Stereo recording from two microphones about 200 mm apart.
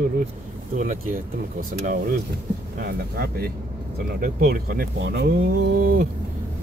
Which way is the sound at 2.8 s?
50° right (ahead or behind).